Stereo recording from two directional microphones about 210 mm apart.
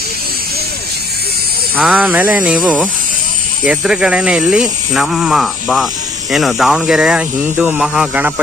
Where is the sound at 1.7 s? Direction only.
5° right (ahead or behind).